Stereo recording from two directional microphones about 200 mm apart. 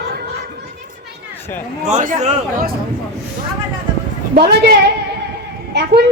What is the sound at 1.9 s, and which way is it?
Speech, 35° right (ahead or behind).